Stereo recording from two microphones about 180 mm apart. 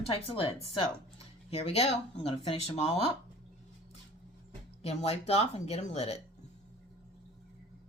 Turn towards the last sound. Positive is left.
turn(degrees=35)  # may be behind; listen again after turning